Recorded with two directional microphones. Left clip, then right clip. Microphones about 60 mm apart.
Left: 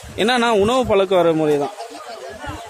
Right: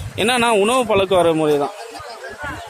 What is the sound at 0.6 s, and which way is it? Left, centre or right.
Speech, left.